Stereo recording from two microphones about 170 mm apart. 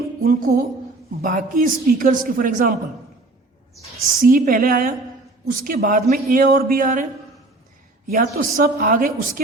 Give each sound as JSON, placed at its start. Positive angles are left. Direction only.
{"t": 0.2, "sound": "a woman's voice", "side_deg": -55}
{"t": 4.2, "sound": "a woman's voice", "side_deg": -55}
{"t": 8.1, "sound": "a man's voice", "side_deg": -50}